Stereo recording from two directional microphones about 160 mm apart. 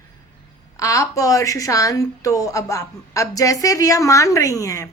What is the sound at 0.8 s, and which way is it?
A woman's voice, 20° left (ahead or behind).